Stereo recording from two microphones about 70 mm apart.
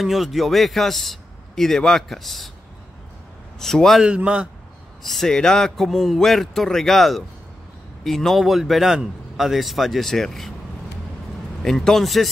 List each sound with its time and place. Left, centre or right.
0.0 s a man's voice: centre
3.5 s a man's voice: centre
4.0 s a man's voice: centre
5.0 s a man's voice: centre
11.6 s a man's voice: centre